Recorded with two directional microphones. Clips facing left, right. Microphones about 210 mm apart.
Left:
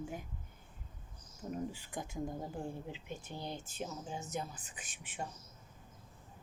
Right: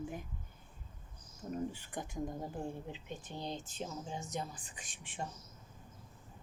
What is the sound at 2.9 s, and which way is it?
Speech, 10° left (ahead or behind).